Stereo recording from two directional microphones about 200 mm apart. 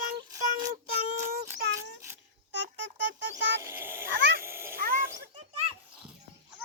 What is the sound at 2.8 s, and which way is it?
Speech, 65° right (ahead or behind).